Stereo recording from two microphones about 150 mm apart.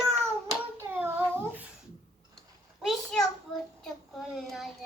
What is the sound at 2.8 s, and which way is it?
Speech, 5° left (ahead or behind).